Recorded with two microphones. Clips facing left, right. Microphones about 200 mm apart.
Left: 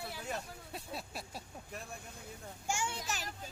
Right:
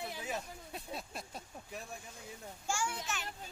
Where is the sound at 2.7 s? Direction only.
20° left (ahead or behind).